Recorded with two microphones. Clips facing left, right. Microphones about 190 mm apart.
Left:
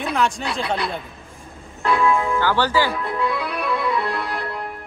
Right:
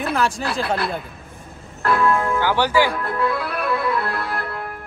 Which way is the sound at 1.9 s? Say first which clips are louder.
Even; centre (ahead or behind).